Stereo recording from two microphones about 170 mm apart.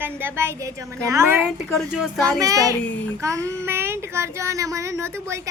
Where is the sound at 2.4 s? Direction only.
20° right (ahead or behind).